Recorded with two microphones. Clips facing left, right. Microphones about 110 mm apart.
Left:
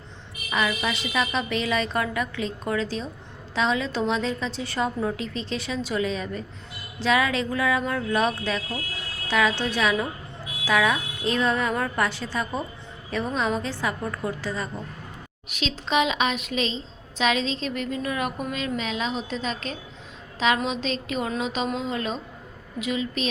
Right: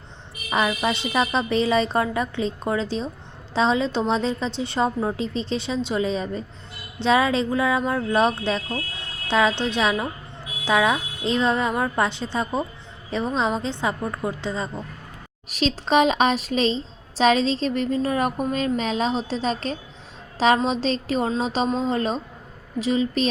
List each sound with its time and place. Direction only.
0.5 s a woman's voice: 35° right (ahead or behind)
15.4 s a woman's voice: 40° right (ahead or behind)